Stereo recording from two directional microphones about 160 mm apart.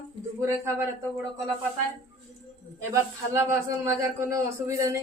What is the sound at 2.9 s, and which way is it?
A man's voice, 15° right (ahead or behind).